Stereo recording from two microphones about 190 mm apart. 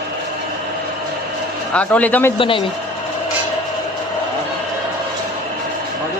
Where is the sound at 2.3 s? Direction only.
25° left (ahead or behind).